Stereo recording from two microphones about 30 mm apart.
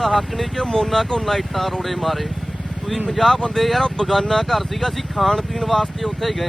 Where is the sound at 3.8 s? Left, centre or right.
Centre.